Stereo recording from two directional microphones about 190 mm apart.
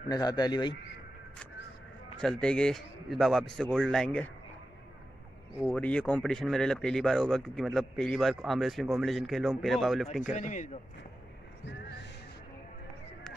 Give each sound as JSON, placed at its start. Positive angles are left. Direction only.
{"t": 0.1, "sound": "a man's voice", "side_deg": 20}
{"t": 2.1, "sound": "speech", "side_deg": 5}
{"t": 5.7, "sound": "speech", "side_deg": 5}
{"t": 10.3, "sound": "speech", "side_deg": 40}